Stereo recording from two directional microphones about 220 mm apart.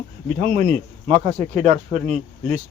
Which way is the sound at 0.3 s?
35° right (ahead or behind).